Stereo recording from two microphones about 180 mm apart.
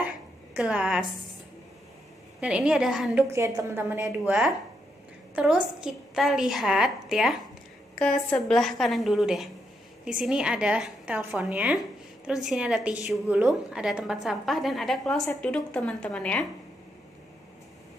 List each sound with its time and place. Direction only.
0.6 s a woman's voice: 5° right (ahead or behind)
2.4 s a woman's voice: 5° right (ahead or behind)
3.3 s a woman's voice: 15° right (ahead or behind); by 16.4 s 5° left (ahead or behind)